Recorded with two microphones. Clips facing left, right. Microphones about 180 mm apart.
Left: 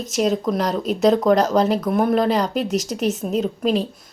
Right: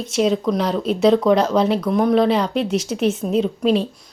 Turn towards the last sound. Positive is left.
turn(degrees=0)  # may be behind; listen again after turning